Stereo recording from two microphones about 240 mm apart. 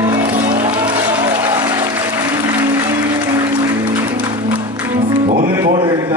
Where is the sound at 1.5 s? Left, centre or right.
Centre.